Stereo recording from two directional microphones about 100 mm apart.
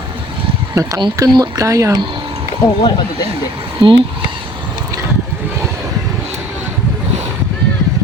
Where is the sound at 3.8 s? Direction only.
60° right (ahead or behind).